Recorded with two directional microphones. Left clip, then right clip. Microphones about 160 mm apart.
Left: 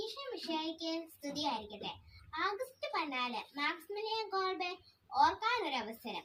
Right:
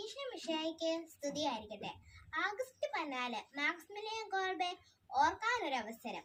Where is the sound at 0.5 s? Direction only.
25° right (ahead or behind).